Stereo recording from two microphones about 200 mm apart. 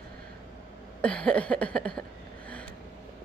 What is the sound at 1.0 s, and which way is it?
A woman's voice, 5° left (ahead or behind).